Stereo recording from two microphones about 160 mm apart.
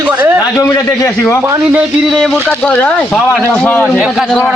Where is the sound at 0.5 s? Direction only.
15° left (ahead or behind).